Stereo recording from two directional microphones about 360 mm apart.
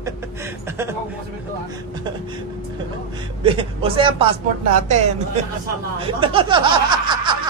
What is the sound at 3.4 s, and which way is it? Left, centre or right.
Speech, centre.